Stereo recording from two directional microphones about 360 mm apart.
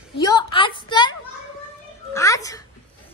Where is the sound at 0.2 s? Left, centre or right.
Centre.